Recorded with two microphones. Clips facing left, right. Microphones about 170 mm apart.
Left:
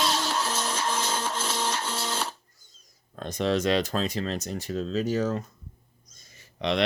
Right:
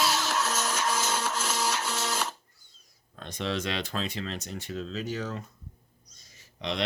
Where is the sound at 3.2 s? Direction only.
40° left (ahead or behind).